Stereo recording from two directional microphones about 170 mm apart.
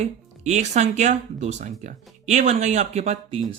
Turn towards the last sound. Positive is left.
turn(degrees=-40)  # may be behind; listen again after turning